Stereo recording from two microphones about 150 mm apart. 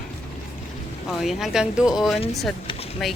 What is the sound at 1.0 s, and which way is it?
Speech, centre (ahead or behind).